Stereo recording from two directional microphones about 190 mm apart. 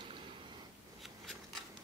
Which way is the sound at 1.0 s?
Centre (ahead or behind).